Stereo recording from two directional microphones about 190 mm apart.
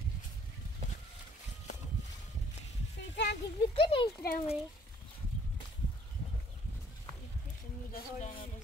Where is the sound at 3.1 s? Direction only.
60° left (ahead or behind).